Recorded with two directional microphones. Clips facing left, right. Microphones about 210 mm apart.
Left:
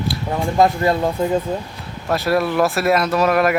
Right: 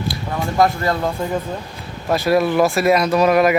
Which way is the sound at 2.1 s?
Centre (ahead or behind).